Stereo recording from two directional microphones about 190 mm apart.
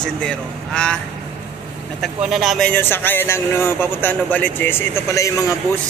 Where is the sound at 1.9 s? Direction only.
Centre (ahead or behind).